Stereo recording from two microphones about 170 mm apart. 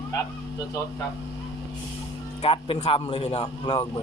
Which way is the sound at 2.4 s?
40° left (ahead or behind).